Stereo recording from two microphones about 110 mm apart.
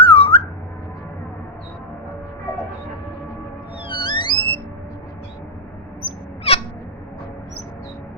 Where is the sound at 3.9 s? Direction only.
45° left (ahead or behind).